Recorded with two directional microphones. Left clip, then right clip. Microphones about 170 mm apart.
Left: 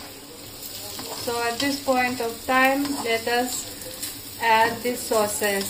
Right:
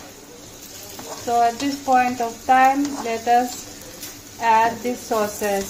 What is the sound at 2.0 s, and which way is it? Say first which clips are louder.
Frying: right 5 dB; 50° right (ahead or behind).